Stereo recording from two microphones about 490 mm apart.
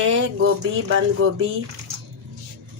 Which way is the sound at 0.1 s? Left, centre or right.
Right.